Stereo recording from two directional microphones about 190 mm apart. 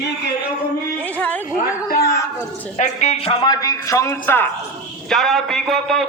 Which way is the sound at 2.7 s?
35° left (ahead or behind).